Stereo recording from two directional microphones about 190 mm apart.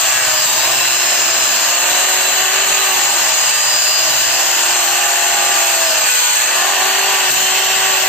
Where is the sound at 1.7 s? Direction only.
5° left (ahead or behind).